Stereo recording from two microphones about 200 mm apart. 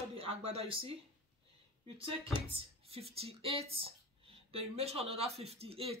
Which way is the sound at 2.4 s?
30° right (ahead or behind).